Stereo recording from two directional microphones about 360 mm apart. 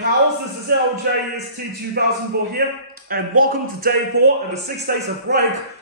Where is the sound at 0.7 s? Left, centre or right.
Right.